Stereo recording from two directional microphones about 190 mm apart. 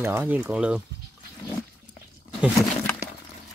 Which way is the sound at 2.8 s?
10° left (ahead or behind).